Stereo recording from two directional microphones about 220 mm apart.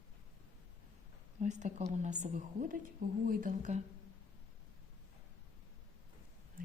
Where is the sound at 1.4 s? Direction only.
35° right (ahead or behind).